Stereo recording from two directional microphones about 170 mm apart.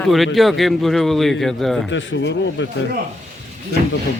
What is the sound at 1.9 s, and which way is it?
Speech, 90° left.